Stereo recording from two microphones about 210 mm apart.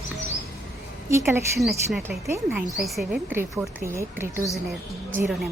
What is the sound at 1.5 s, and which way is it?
Speech, centre (ahead or behind).